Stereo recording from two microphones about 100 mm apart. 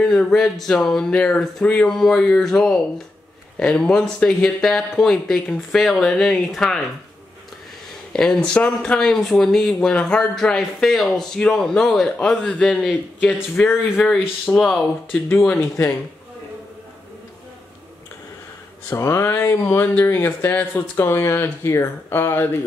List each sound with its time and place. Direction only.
0.0 s speech: 5° left (ahead or behind)
8.1 s a man's voice: 5° left (ahead or behind)
14.5 s speech: 5° left (ahead or behind)
15.5 s speech: 25° left (ahead or behind)
18.9 s speech: 25° left (ahead or behind)